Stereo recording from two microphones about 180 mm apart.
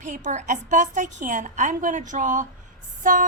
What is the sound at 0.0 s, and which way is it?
A woman's voice, 45° right (ahead or behind).